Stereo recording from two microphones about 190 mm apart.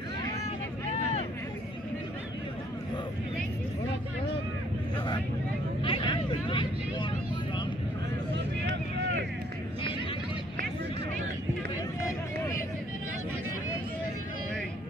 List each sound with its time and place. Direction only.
5.8 s vehicle: 25° left (ahead or behind)